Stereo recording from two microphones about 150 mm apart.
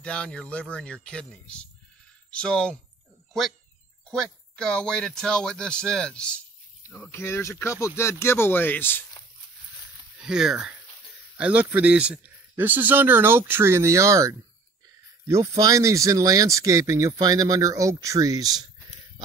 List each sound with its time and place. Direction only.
0.0 s speech: 5° left (ahead or behind)
4.1 s speech: 5° left (ahead or behind)
10.1 s speech: 5° right (ahead or behind); by 18.6 s 25° right (ahead or behind)